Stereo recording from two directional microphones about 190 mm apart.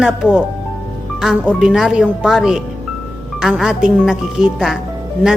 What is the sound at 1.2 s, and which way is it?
A woman's voice, 5° right (ahead or behind).